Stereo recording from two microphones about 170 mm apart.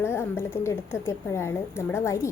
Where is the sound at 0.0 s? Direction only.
15° left (ahead or behind).